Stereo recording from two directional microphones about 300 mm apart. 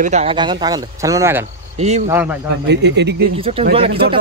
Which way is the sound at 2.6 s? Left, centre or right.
Right.